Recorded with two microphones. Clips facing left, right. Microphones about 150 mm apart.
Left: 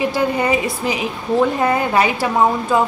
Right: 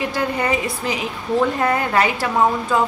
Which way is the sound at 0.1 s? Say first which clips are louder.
Left 3 dB; 15° left (ahead or behind).